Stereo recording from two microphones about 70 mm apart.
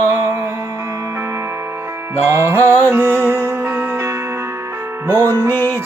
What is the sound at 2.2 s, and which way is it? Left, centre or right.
Music, right.